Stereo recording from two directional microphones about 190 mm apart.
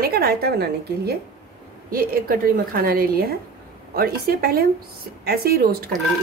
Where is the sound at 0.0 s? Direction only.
55° right (ahead or behind).